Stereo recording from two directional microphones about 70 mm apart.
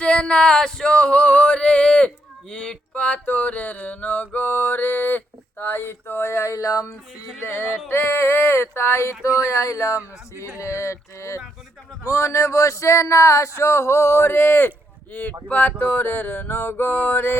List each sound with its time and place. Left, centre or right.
0.0 s male singing: centre; by 6.8 s left
7.4 s a sound: left
10.6 s speech: left
15.1 s mantra: left